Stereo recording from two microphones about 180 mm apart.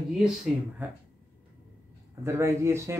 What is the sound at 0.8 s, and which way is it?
Speech, 10° right (ahead or behind).